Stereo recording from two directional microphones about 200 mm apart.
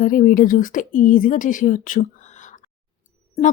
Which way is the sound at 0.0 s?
45° left (ahead or behind).